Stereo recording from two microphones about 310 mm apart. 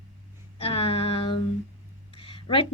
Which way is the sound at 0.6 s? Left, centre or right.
Centre.